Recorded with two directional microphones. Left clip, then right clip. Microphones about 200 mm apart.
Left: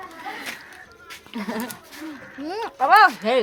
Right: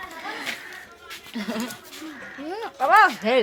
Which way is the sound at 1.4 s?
45° left (ahead or behind).